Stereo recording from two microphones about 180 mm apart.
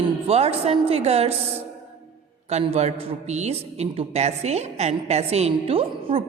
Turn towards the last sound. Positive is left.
turn(degrees=-30)  # may be behind; listen again after turning